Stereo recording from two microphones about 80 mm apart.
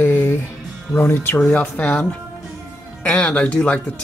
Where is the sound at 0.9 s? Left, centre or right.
Left.